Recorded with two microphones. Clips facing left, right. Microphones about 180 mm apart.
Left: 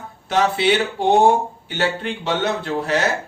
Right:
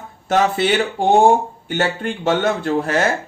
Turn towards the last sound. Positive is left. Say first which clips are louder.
# right 3 dB
turn(degrees=-50)  # may be behind; listen again after turning